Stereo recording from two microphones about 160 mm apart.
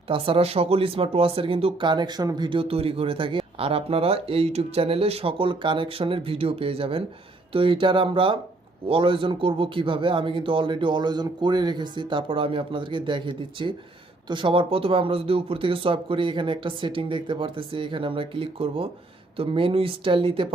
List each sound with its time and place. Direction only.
0.1 s speech: 35° right (ahead or behind)